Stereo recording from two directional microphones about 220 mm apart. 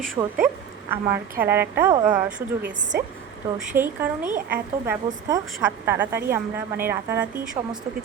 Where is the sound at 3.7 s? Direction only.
10° right (ahead or behind).